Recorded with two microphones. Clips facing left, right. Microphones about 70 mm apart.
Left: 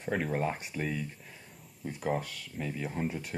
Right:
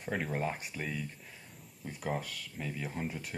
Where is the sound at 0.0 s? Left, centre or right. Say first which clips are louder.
Left 3 dB; centre.